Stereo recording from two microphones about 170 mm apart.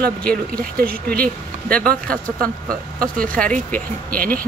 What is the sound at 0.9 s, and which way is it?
Speech, 60° right (ahead or behind).